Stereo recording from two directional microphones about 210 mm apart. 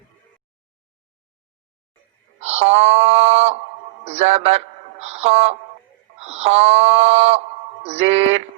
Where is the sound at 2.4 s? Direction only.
30° right (ahead or behind).